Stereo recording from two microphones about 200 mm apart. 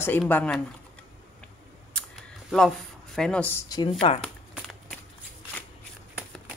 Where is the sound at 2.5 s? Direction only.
Centre (ahead or behind); by 4.1 s 25° left (ahead or behind).